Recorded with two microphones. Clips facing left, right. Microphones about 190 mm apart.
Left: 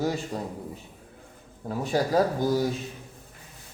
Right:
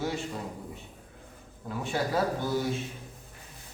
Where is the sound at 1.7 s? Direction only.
40° left (ahead or behind).